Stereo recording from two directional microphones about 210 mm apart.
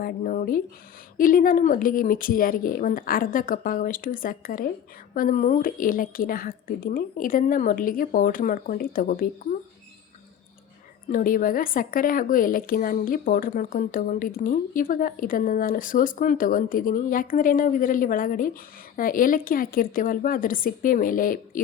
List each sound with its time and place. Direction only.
0.0 s speech: 40° left (ahead or behind)
11.1 s speech: 40° left (ahead or behind)